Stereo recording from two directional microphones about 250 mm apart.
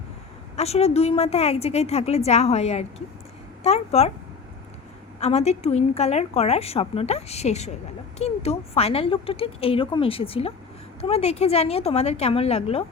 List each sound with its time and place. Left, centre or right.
0.5 s a woman's voice: left
5.2 s a woman's voice: left